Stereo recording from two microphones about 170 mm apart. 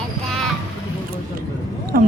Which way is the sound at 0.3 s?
Centre (ahead or behind).